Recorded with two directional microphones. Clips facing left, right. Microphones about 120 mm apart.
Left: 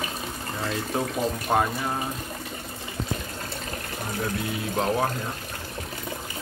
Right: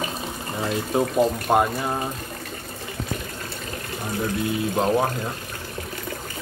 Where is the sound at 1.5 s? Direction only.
15° right (ahead or behind).